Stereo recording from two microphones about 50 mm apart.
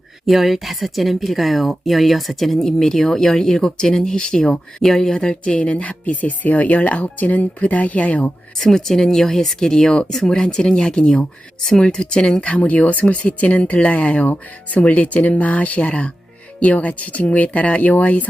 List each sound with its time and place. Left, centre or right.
0.3 s speech: centre; by 8.3 s left
8.5 s speech: centre; by 18.3 s left